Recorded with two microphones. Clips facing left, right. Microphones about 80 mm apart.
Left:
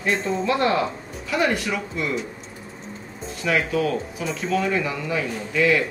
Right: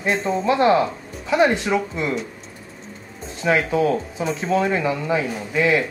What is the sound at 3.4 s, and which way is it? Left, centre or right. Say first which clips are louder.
Speech: right 3 dB; right.